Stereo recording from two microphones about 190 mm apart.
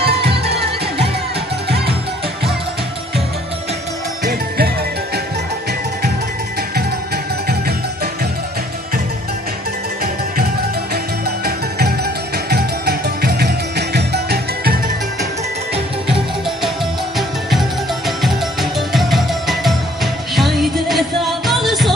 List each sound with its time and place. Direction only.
0.0 s music: 60° right (ahead or behind)
4.2 s music: 50° right (ahead or behind)
7.4 s music: 55° right (ahead or behind)
11.2 s music: 55° right (ahead or behind)
17.5 s music: centre (ahead or behind)